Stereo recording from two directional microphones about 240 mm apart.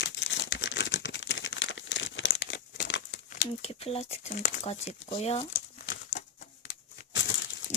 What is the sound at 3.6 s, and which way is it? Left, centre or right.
Speech, left.